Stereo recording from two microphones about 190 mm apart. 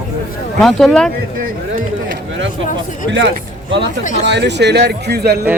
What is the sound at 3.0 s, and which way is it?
Speech, 70° right (ahead or behind).